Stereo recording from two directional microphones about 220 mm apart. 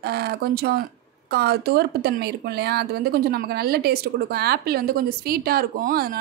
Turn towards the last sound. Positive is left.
turn(degrees=-40)  # may be behind; listen again after turning